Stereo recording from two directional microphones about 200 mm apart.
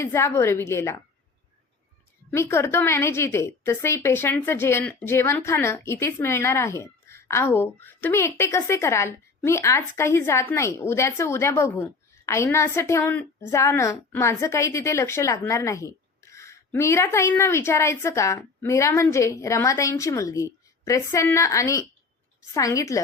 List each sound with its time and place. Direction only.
0.0 s a woman's voice: 15° left (ahead or behind)
2.3 s a woman's voice: 15° left (ahead or behind)